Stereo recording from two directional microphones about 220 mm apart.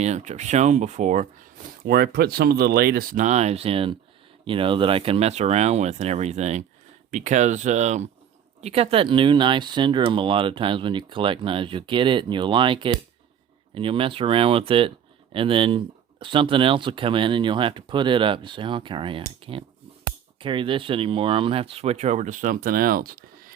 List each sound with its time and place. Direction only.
0.0 s speech: 30° right (ahead or behind)
1.8 s speech: 45° right (ahead or behind)